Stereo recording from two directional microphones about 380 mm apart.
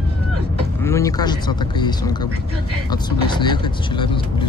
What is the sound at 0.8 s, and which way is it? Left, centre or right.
Speech, centre.